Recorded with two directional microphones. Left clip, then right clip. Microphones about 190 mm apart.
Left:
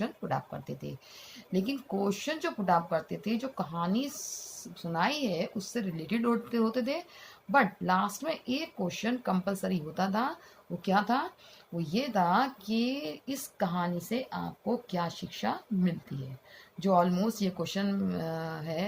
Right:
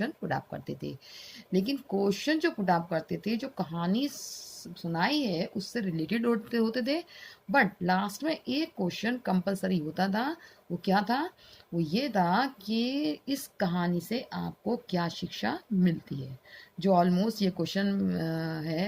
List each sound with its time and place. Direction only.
0.0 s a woman's voice: 50° right (ahead or behind)